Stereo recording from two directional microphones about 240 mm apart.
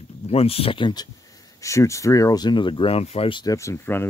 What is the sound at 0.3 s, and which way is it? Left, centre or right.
Speech, left.